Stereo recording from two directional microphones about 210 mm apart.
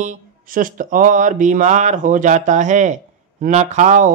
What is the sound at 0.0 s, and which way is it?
Speech, 40° right (ahead or behind).